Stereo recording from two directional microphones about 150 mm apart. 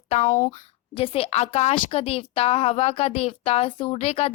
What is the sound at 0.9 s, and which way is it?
Speech, 40° left (ahead or behind).